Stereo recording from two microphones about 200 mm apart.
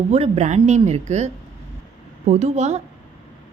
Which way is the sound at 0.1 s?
35° right (ahead or behind).